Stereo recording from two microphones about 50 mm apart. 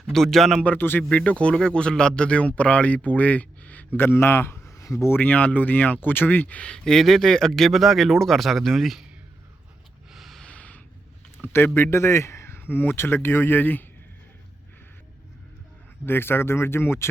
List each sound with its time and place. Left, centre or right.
0.1 s speech: centre
0.8 s speech: left
1.1 s a man's voice: left
3.9 s a man's voice: left
5.1 s speech: left
6.6 s speech: centre
10.1 s a sound: centre
10.4 s a sound: left
11.4 s speech: left
16.0 s speech: left